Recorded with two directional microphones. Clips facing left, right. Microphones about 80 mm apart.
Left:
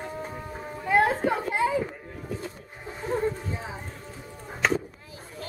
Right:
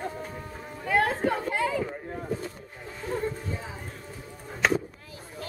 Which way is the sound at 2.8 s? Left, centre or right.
Left.